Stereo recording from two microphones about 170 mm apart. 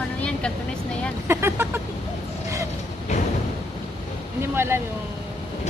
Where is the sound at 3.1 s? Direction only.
40° left (ahead or behind).